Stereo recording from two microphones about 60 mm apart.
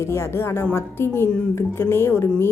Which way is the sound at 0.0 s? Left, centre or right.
Left.